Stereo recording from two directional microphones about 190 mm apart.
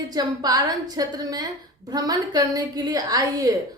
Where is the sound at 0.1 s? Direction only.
20° right (ahead or behind).